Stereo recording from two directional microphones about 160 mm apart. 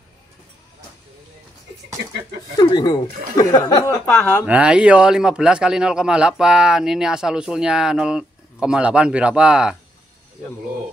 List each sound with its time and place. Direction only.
2.5 s speech: 25° left (ahead or behind)
4.0 s speech: 10° left (ahead or behind)
4.5 s a man's voice: 5° right (ahead or behind)